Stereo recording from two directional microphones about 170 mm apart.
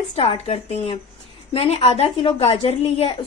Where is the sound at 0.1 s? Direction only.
35° left (ahead or behind).